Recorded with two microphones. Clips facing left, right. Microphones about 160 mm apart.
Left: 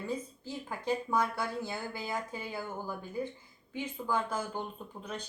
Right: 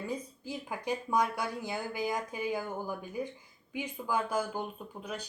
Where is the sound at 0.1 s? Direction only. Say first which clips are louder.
Even; 15° right (ahead or behind).